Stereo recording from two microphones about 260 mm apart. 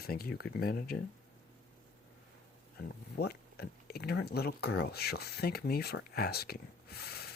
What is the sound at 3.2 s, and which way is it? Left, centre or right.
Speech, left.